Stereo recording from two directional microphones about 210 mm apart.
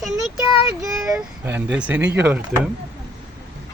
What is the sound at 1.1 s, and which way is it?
Speech, 10° right (ahead or behind).